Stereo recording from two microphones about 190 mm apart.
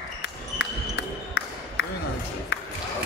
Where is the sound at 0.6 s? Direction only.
70° left (ahead or behind).